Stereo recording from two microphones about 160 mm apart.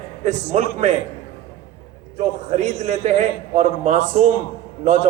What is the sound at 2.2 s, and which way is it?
A man's voice, 45° right (ahead or behind).